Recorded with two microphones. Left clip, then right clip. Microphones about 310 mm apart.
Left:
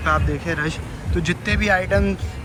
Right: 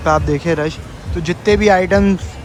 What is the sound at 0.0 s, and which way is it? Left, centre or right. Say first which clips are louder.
Speech: right 6 dB; centre.